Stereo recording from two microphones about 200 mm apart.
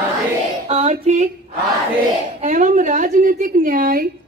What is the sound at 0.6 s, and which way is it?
Female singing, 35° right (ahead or behind).